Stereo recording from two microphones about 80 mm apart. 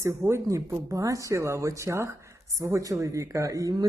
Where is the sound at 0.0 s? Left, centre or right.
Right.